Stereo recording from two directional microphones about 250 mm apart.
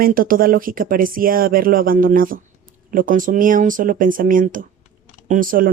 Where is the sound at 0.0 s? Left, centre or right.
Right.